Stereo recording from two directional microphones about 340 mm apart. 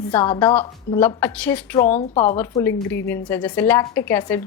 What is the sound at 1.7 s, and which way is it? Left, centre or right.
Speech, centre.